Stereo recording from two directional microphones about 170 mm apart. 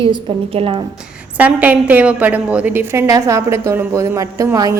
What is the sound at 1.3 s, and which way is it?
A woman's voice, 10° right (ahead or behind).